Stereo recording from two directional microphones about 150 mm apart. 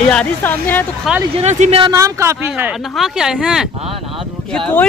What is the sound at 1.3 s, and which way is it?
Speech, 50° right (ahead or behind).